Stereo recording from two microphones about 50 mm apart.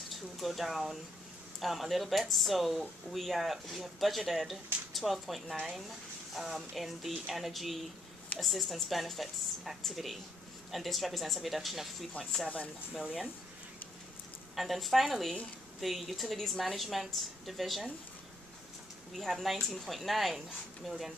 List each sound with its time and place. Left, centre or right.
0.1 s speech: centre
12.1 s speech: left
14.5 s speech: centre
19.1 s speech: centre